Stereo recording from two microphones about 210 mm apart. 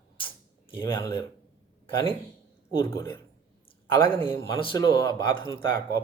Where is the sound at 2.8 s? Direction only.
10° left (ahead or behind).